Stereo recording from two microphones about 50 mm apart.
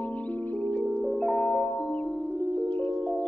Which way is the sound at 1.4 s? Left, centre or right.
Left.